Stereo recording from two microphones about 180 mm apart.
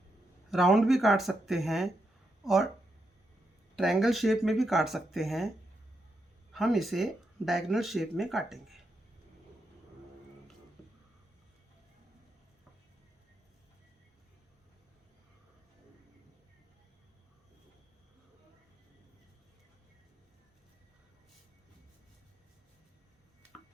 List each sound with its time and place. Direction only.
0.5 s speech: centre (ahead or behind)
3.8 s speech: centre (ahead or behind)
6.5 s speech: centre (ahead or behind)